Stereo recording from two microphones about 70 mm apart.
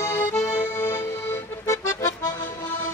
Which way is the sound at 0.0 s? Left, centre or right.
Left.